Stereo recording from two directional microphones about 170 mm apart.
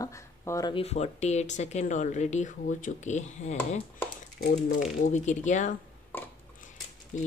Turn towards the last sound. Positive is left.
turn(degrees=45)  # may be behind; listen again after turning